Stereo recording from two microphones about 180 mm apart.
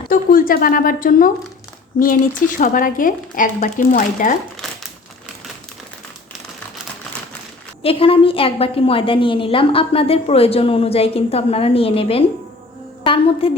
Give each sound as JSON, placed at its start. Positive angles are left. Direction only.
{"t": 0.1, "sound": "speech", "side_deg": 50}
{"t": 7.8, "sound": "a woman's voice", "side_deg": 30}